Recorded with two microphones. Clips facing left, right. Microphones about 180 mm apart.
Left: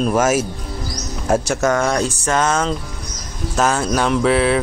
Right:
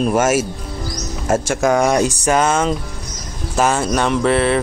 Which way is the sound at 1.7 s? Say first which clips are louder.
Right 5 dB; 15° right (ahead or behind).